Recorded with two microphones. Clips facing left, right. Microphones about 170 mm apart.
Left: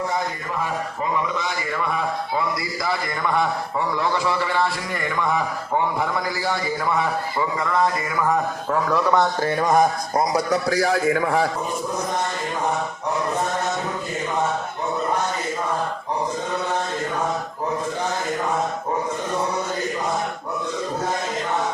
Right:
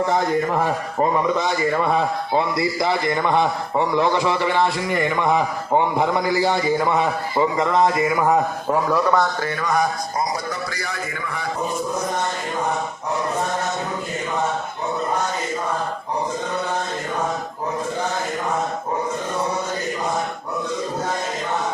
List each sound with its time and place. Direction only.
0.6 s a man's voice: 45° right (ahead or behind); by 8.8 s 20° right (ahead or behind)
8.9 s speech: centre (ahead or behind)
9.4 s a sound: 30° left (ahead or behind)
9.7 s a man's voice: 65° left (ahead or behind); by 11.4 s 85° left